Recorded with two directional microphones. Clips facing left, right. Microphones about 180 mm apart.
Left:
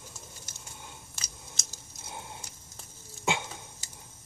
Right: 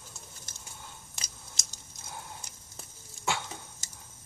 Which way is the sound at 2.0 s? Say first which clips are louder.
Left 1 dB; 20° left (ahead or behind).